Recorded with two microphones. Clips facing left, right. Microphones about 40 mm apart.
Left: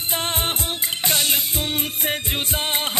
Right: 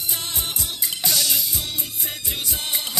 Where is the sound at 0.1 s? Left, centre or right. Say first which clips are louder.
Left 7 dB; left.